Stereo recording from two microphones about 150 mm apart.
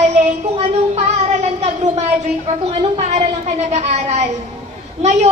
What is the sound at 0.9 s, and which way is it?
Speech, 45° right (ahead or behind).